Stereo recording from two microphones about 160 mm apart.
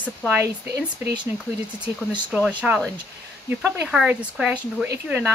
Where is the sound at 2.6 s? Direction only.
5° right (ahead or behind).